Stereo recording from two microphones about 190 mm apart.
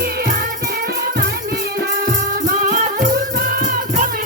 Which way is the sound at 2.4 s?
45° right (ahead or behind).